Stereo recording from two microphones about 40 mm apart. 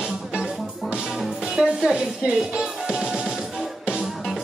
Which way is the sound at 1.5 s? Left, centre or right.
Centre.